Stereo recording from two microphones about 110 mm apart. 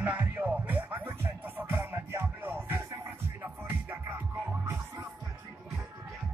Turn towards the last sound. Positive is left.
turn(degrees=-25)  # may be behind; listen again after turning